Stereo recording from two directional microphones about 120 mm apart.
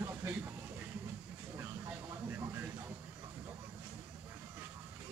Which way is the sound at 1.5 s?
20° right (ahead or behind).